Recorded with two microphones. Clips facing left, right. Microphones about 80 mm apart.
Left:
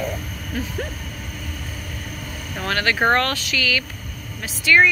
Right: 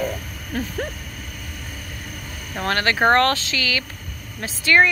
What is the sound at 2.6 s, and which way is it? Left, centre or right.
Speech, right.